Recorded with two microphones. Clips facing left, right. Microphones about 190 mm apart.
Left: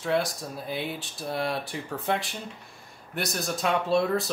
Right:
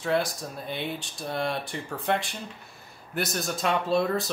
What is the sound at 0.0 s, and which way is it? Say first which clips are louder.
Speech: even; centre (ahead or behind).